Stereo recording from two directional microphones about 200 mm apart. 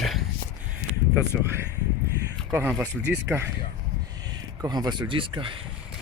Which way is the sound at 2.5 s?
10° right (ahead or behind).